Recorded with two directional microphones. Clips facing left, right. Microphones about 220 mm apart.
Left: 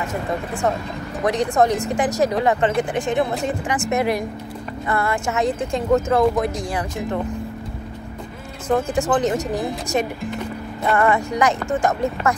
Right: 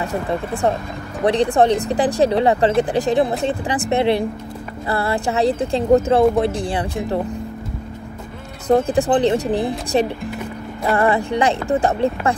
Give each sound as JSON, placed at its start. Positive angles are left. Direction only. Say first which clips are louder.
{"t": 0.0, "sound": "speech", "louder": "right 3 dB", "side_deg": -35}
{"t": 8.6, "sound": "speech", "louder": "right 4 dB", "side_deg": -35}